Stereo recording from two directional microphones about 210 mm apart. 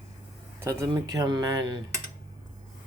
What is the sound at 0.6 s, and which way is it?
Speech, 15° right (ahead or behind).